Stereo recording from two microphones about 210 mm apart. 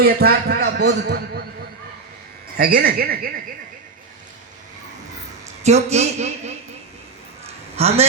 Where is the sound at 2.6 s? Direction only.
45° right (ahead or behind).